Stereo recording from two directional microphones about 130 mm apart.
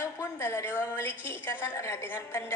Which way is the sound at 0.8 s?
15° left (ahead or behind).